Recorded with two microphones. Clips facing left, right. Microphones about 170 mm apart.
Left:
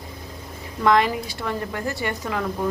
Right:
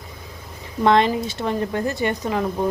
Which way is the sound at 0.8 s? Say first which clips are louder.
Right 2 dB; 25° right (ahead or behind).